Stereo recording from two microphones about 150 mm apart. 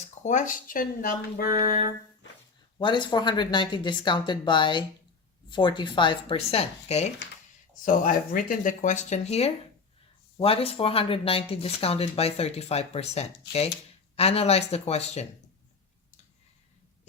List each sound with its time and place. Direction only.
0.0 s speech: 50° left (ahead or behind); by 1.9 s 70° left (ahead or behind)
2.7 s speech: 30° left (ahead or behind)
7.9 s speech: 65° left (ahead or behind); by 15.3 s 45° left (ahead or behind)